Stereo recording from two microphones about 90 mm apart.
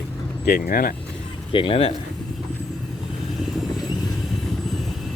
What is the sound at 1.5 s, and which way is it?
Speech, 70° left (ahead or behind).